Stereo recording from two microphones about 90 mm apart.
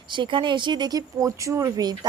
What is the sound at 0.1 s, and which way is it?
A woman's voice, 65° right (ahead or behind).